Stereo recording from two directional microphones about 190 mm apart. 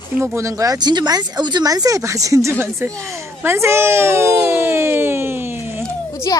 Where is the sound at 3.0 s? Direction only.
15° right (ahead or behind).